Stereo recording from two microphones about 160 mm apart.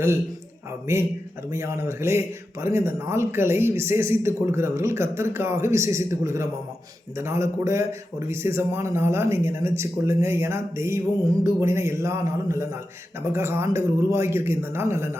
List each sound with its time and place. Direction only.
0.9 s a man's voice: 15° right (ahead or behind)